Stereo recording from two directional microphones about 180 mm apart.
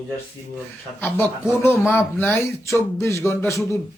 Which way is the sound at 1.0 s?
10° left (ahead or behind).